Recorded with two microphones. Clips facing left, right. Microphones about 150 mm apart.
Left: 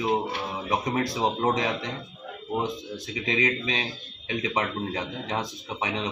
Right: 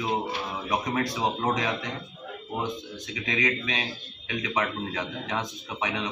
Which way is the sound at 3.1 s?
30° left (ahead or behind).